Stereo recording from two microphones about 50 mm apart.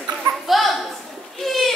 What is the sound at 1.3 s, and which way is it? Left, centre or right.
Goat, centre.